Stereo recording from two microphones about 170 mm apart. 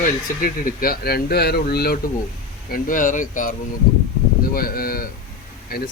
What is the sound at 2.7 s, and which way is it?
A man's voice, 50° left (ahead or behind).